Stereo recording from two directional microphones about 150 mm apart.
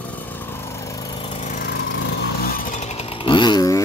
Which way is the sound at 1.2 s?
50° left (ahead or behind).